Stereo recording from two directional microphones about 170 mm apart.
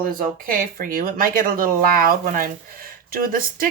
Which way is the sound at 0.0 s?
55° right (ahead or behind).